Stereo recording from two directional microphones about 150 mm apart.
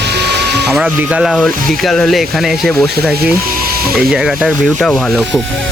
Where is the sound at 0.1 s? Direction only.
90° right.